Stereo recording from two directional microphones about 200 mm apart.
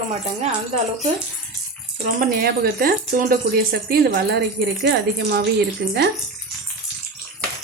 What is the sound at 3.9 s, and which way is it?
Speech, 60° right (ahead or behind).